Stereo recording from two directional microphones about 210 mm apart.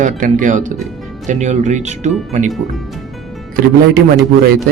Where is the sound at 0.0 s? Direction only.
40° right (ahead or behind).